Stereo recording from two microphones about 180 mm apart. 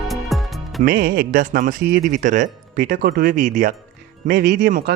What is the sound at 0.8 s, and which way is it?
Speech, 50° right (ahead or behind).